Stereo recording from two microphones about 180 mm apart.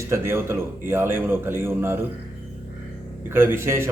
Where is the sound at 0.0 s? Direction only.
15° right (ahead or behind).